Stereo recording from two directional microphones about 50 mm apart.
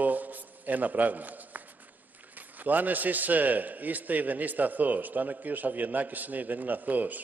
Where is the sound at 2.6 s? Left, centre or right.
Right.